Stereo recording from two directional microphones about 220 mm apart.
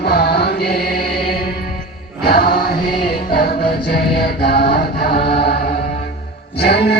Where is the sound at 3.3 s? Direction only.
45° left (ahead or behind).